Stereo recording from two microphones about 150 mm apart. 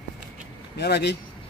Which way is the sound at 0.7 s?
90° left.